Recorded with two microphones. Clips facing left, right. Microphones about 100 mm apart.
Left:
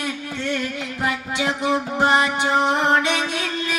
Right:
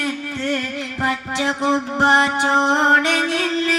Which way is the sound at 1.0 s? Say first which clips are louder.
Right 2 dB; 35° right (ahead or behind).